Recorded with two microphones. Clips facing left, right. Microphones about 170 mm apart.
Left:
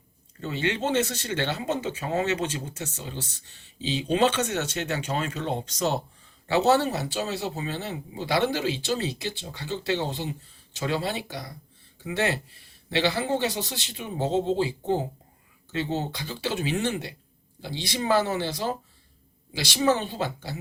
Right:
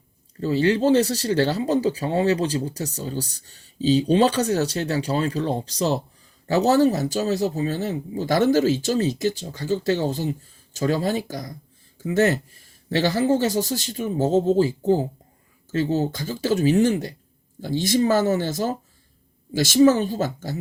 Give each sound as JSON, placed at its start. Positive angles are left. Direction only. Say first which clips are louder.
{"t": 0.3, "sound": "speech", "louder": "right 8 dB", "side_deg": -35}